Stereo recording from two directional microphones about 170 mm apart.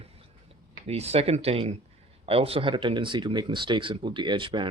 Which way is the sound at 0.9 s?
40° right (ahead or behind).